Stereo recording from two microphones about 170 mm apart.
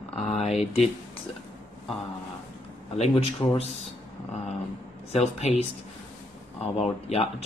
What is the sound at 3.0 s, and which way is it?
Speech, 35° left (ahead or behind).